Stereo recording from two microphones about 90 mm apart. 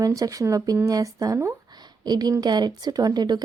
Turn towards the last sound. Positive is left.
turn(degrees=-50)  # may be behind; listen again after turning